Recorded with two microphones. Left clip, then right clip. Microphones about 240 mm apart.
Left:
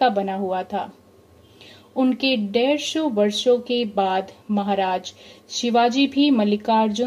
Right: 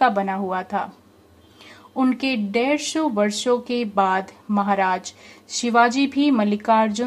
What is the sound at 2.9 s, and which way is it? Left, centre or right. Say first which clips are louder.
Speech: left 1 dB; right.